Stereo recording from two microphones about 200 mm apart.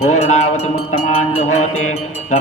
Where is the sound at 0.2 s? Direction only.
35° left (ahead or behind).